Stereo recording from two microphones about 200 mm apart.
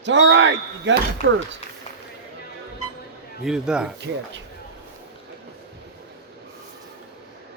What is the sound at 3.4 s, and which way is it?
Speech, 5° right (ahead or behind).